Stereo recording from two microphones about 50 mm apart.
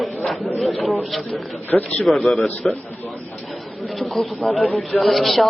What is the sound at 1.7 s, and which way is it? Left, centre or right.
Speech, left.